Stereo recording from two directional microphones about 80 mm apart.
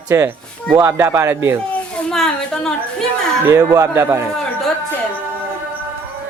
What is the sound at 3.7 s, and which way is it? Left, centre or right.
Speech, right.